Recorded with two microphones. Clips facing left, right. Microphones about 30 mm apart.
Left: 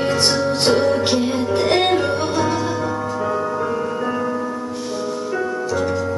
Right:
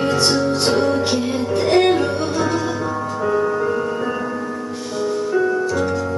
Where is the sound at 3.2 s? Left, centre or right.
Centre.